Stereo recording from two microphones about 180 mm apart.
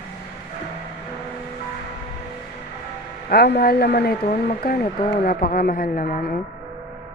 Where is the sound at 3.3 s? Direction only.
60° left (ahead or behind).